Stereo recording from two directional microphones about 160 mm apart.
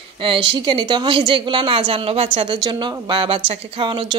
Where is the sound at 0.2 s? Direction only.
30° right (ahead or behind).